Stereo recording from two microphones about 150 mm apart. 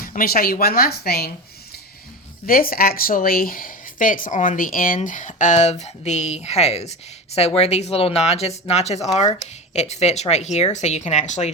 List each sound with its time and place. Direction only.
0.0 s speech: 70° left (ahead or behind); by 1.3 s 90° left
2.5 s speech: 75° left (ahead or behind); by 11.5 s 50° left (ahead or behind)